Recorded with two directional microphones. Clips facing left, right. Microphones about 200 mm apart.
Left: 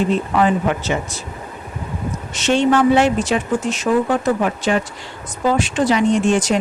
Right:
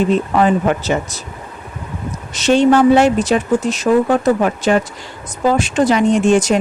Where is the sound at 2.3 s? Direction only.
40° right (ahead or behind).